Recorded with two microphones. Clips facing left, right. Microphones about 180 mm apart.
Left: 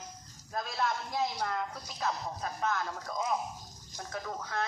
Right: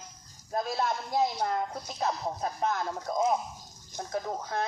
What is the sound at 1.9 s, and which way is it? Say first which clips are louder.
Speech: right 4 dB; 30° right (ahead or behind).